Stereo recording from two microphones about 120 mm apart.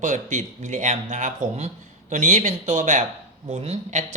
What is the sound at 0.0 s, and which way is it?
Speech, 90° right.